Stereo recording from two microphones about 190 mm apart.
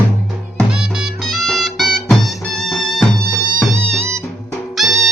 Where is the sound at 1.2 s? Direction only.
Centre (ahead or behind).